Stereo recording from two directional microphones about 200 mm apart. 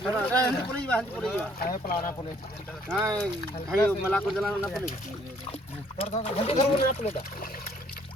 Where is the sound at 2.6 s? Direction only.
Centre (ahead or behind).